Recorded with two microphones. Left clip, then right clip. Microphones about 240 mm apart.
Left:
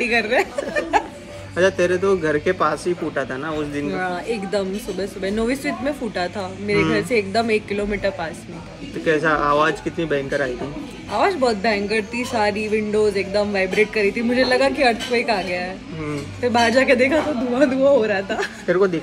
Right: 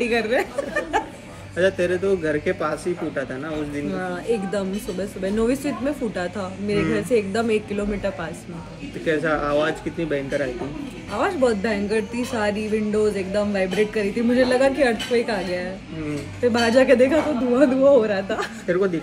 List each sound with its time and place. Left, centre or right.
0.0 s a woman's voice: centre
1.6 s speech: left
3.9 s a woman's voice: centre
9.0 s speech: centre
11.1 s a woman's voice: centre
18.7 s speech: centre